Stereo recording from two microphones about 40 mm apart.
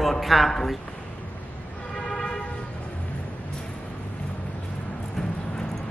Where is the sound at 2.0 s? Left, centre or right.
Centre.